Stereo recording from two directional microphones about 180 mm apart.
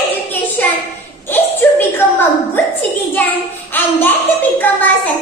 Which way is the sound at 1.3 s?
10° left (ahead or behind).